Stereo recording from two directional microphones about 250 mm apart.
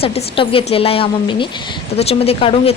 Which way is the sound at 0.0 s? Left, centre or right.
Left.